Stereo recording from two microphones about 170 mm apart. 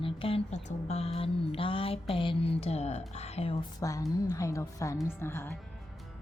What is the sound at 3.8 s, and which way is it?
A woman's voice, 20° left (ahead or behind).